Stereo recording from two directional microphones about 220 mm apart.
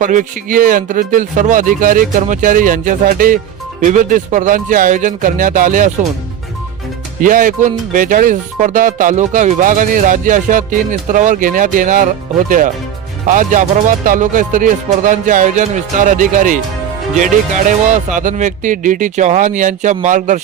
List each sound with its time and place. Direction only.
0.0 s speech: 35° right (ahead or behind)
7.2 s speech: 40° right (ahead or behind)